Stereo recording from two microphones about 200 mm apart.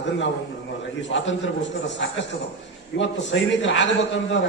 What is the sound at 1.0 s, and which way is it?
A man's voice, 65° left (ahead or behind).